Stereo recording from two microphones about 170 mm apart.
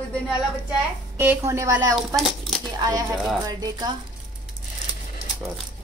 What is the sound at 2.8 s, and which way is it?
Speech, 20° right (ahead or behind).